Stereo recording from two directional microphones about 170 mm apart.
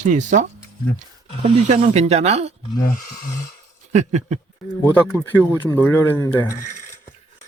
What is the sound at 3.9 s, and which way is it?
Speech, 45° right (ahead or behind).